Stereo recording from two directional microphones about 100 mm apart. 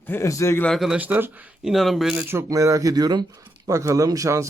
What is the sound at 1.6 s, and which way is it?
Speech, centre (ahead or behind).